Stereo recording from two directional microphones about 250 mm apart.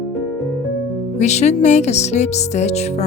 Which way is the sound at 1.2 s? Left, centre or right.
Left.